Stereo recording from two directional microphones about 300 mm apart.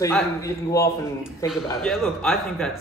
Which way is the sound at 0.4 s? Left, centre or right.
Centre.